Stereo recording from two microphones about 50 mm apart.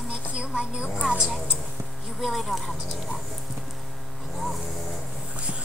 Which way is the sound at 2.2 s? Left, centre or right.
Centre.